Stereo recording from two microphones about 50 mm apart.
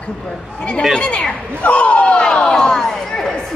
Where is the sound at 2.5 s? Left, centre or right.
Centre.